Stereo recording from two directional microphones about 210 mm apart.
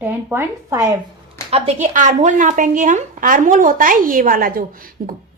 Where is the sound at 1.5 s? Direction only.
30° right (ahead or behind).